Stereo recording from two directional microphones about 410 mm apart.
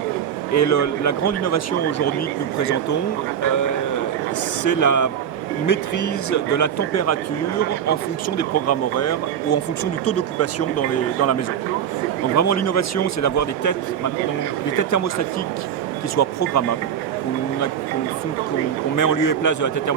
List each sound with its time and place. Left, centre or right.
0.5 s speech: left
4.6 s a man's voice: left
8.4 s speech: left
12.4 s speech: left
14.8 s a man's voice: left
16.1 s speech: left
18.9 s a man's voice: left